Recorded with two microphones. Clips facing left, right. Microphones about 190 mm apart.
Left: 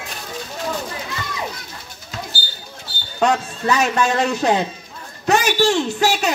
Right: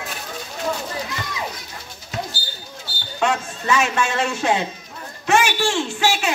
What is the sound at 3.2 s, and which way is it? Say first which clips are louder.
A child's voice: left 4 dB; 35° left (ahead or behind).